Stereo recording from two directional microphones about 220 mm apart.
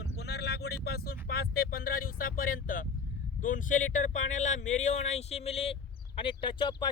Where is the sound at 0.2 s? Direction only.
50° left (ahead or behind).